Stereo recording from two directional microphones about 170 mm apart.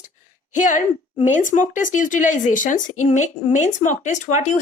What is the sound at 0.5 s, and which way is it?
Speech, 50° left (ahead or behind).